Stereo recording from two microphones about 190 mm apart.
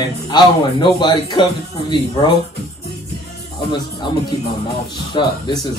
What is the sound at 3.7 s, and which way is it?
Speech, 25° left (ahead or behind).